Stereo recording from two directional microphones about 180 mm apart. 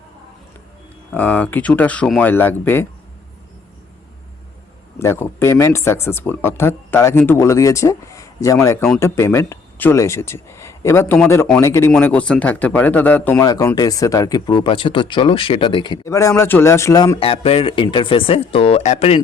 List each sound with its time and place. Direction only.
1.1 s speech: 10° left (ahead or behind)
4.9 s speech: 15° left (ahead or behind)
13.4 s speech: 20° left (ahead or behind)
17.2 s speech: 30° left (ahead or behind)